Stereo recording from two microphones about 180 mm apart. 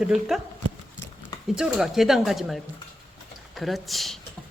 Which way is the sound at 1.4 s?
5° right (ahead or behind).